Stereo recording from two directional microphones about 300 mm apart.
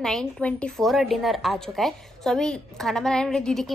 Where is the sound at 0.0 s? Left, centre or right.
Centre.